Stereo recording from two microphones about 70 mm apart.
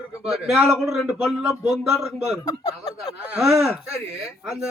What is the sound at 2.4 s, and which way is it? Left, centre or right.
Speech, left.